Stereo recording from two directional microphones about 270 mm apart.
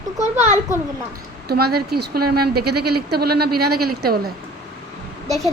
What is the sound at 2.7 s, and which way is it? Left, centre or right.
Speech, right.